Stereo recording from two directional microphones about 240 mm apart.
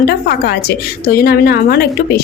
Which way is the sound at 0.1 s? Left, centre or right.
Left.